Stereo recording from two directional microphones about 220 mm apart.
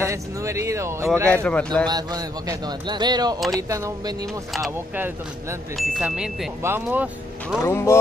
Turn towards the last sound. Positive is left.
turn(degrees=10)  # may be behind; listen again after turning